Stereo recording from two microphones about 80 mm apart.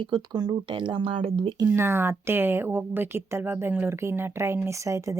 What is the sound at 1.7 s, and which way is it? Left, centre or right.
Speech, right.